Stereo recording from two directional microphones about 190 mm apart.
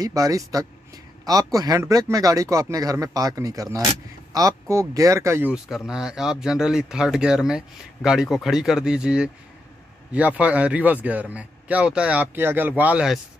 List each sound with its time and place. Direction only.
0.0 s speech: 20° right (ahead or behind)